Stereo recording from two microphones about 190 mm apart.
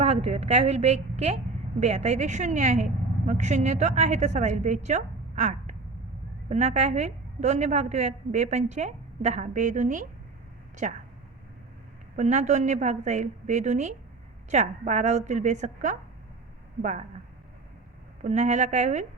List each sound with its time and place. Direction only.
0.0 s a woman's voice: 35° right (ahead or behind)
12.1 s a woman's voice: 40° right (ahead or behind)
18.2 s a woman's voice: 40° right (ahead or behind)